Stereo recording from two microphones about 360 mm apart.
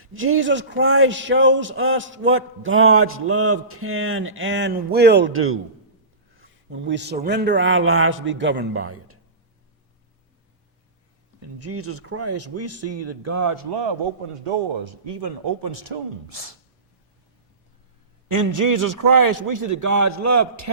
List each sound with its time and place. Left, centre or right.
0.0 s a man's voice: right
11.6 s a man's voice: right
15.1 s speech: right
18.3 s a man's voice: right